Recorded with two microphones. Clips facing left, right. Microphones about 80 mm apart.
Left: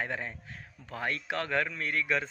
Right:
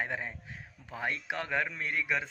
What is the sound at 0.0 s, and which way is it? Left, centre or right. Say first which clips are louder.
Speech: even; centre.